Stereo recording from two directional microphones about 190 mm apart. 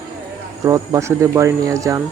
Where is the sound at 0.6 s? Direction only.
20° right (ahead or behind).